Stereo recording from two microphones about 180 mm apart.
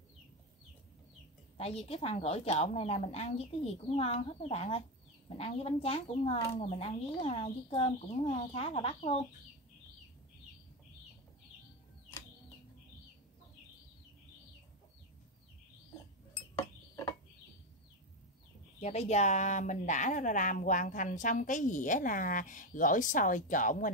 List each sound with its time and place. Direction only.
1.6 s speech: 35° left (ahead or behind)
18.8 s a woman's voice: 40° left (ahead or behind)